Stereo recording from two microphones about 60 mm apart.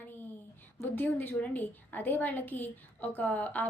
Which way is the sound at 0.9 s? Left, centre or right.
Left.